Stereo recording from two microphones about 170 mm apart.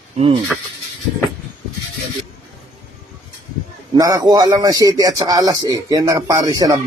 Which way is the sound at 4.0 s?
20° right (ahead or behind).